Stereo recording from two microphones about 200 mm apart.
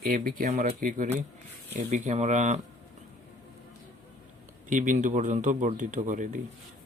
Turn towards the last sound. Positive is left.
turn(degrees=-40)  # may be behind; listen again after turning